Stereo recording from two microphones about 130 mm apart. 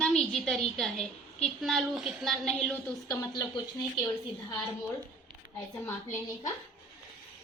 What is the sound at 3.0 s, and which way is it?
Speech, 30° left (ahead or behind).